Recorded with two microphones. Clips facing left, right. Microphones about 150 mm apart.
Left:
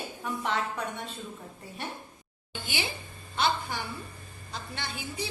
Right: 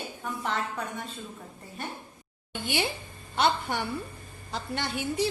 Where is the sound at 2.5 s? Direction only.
60° right (ahead or behind).